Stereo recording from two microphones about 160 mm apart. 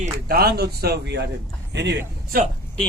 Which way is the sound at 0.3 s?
75° right (ahead or behind).